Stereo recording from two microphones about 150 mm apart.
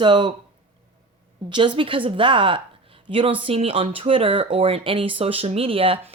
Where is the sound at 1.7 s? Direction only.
35° right (ahead or behind).